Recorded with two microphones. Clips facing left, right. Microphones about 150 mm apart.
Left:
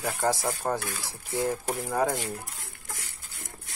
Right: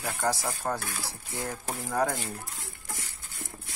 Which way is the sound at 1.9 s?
10° left (ahead or behind).